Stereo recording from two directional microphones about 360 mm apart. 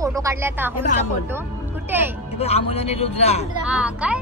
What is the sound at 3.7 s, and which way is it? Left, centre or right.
Speech, centre.